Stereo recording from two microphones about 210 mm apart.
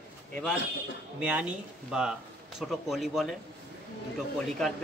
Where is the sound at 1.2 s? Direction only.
5° right (ahead or behind).